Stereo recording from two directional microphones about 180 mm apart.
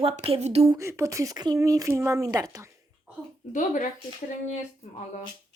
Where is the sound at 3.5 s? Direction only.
45° left (ahead or behind).